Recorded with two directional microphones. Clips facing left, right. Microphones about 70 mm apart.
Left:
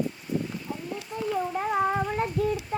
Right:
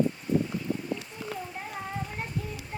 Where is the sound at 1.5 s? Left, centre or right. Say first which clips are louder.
Left 11 dB; left.